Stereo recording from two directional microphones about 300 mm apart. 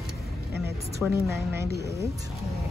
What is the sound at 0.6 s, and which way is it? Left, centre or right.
A woman's voice, centre.